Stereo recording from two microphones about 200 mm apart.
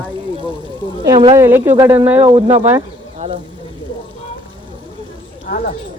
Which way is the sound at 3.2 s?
30° right (ahead or behind).